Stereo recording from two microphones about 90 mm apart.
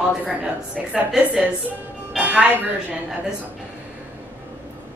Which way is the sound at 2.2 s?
15° right (ahead or behind).